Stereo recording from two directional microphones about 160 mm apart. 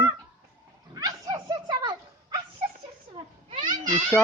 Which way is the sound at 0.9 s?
25° right (ahead or behind).